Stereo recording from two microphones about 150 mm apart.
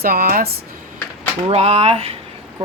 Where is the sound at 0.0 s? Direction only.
85° right.